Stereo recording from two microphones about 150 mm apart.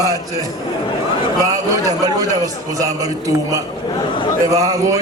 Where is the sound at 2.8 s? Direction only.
20° right (ahead or behind).